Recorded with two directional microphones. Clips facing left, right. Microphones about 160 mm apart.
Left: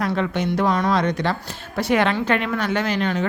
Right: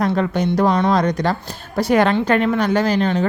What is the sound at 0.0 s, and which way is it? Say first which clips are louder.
A woman's voice: right 4 dB; 40° right (ahead or behind).